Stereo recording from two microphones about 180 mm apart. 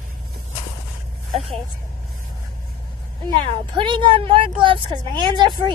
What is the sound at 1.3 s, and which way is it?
Speech, centre (ahead or behind).